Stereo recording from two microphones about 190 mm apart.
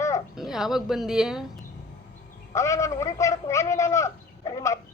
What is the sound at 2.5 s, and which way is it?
A man's voice, 15° left (ahead or behind).